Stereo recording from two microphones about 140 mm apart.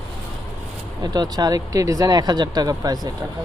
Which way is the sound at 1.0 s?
30° right (ahead or behind).